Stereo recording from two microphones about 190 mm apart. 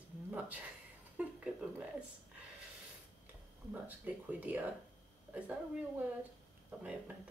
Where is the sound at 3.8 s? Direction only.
10° right (ahead or behind).